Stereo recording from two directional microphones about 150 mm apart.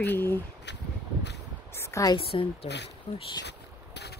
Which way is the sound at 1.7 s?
20° left (ahead or behind).